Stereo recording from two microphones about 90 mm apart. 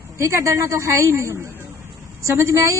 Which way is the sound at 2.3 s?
35° right (ahead or behind).